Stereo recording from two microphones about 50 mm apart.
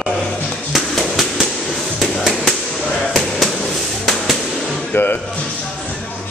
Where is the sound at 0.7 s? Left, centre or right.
Centre.